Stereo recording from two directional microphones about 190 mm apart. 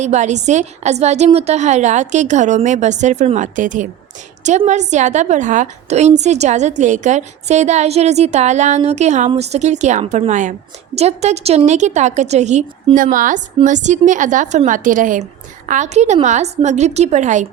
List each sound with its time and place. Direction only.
0.0 s a woman's voice: 40° right (ahead or behind)